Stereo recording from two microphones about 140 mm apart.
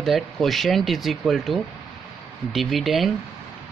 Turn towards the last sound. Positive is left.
turn(degrees=0)  # may be behind; listen again after turning